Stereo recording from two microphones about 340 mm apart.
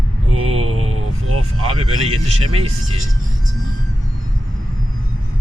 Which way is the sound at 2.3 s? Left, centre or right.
Centre.